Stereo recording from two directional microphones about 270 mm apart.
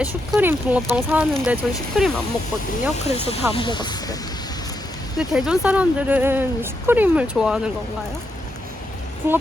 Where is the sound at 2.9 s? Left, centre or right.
Left.